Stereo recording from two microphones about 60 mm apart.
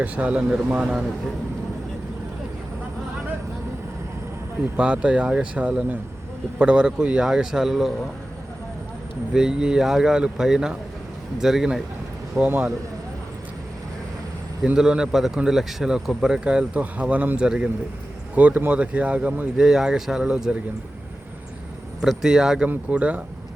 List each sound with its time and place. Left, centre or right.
0.0 s speech: right
4.8 s speech: centre
9.3 s speech: centre
12.4 s speech: right
14.8 s speech: centre
19.5 s speech: centre
22.0 s speech: centre
22.7 s speech: right